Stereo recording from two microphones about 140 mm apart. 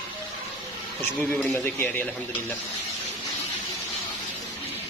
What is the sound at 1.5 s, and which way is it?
Speech, 15° left (ahead or behind).